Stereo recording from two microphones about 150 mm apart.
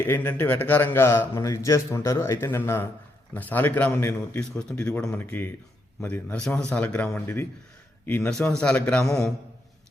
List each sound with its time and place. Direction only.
0.0 s a man's voice: 15° left (ahead or behind)